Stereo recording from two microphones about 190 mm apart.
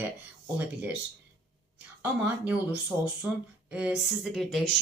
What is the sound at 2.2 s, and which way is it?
Speech, 10° right (ahead or behind).